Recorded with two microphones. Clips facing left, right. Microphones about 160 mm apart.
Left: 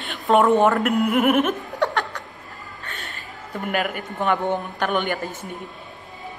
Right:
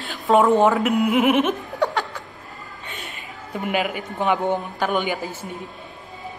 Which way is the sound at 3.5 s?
Centre (ahead or behind).